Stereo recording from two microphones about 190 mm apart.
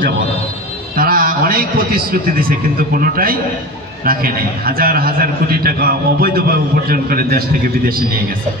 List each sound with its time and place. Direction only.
0.9 s a man's voice: 50° right (ahead or behind)